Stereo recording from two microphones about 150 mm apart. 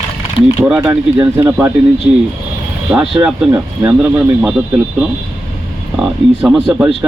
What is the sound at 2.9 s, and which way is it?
Speech, 5° right (ahead or behind).